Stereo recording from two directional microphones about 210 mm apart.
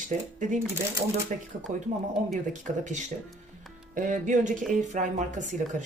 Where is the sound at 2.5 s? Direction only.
35° right (ahead or behind).